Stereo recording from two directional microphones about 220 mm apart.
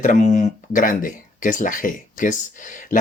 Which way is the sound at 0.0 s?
35° left (ahead or behind).